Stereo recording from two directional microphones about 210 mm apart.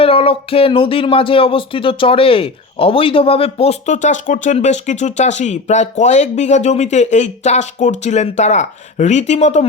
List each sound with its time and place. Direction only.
0.0 s speech: 25° left (ahead or behind)